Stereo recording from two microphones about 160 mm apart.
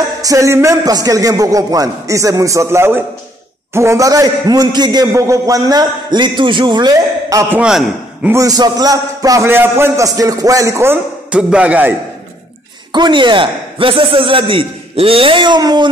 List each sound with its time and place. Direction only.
0.2 s a man's voice: 20° right (ahead or behind)
8.3 s a man's voice: 20° right (ahead or behind)
12.9 s a man's voice: 30° right (ahead or behind)